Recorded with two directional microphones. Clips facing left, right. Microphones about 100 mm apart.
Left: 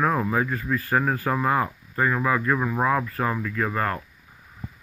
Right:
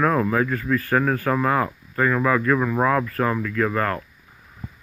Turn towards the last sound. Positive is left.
turn(degrees=20)  # may be behind; listen again after turning